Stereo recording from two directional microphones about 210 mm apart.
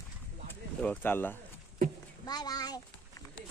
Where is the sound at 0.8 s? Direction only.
10° left (ahead or behind).